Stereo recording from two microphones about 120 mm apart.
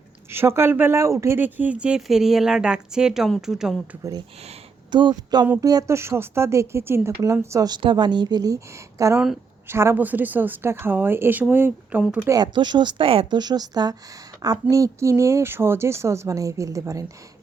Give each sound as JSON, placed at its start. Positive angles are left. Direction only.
{"t": 0.3, "sound": "a woman's voice", "side_deg": -20}
{"t": 4.9, "sound": "a woman's voice", "side_deg": -40}
{"t": 7.5, "sound": "a woman's voice", "side_deg": -35}
{"t": 12.3, "sound": "a woman's voice", "side_deg": -40}